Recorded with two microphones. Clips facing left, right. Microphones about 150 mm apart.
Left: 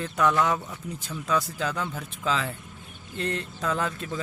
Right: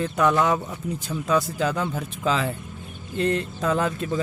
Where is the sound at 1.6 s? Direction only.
15° right (ahead or behind).